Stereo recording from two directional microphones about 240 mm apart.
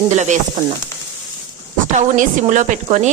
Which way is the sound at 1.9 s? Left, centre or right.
Right.